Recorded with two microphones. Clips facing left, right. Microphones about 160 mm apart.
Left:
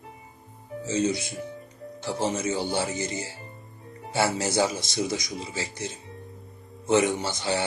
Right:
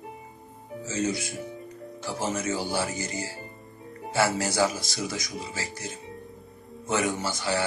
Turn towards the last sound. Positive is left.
turn(degrees=20)  # may be behind; listen again after turning